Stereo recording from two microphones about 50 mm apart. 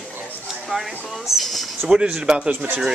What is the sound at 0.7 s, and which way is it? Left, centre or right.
Speech, centre.